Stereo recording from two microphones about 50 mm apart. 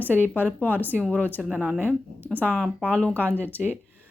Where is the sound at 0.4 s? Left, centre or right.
Right.